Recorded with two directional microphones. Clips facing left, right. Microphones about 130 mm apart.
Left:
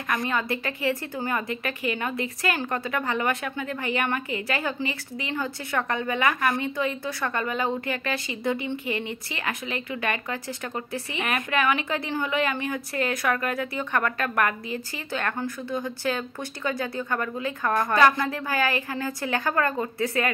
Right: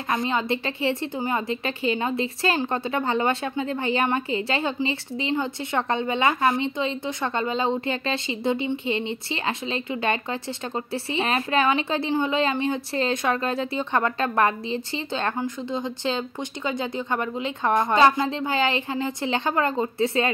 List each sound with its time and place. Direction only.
0.1 s a woman's voice: 25° right (ahead or behind)